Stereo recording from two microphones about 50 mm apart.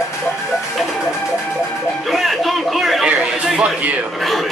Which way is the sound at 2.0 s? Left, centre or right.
Centre.